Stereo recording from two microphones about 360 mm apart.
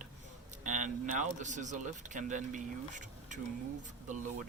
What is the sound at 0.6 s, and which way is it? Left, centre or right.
A man's voice, right.